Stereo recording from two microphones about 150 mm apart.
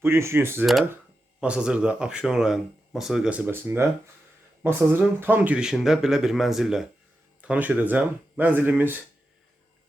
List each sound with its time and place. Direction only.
0.0 s speech: 15° right (ahead or behind)
0.6 s speech: centre (ahead or behind)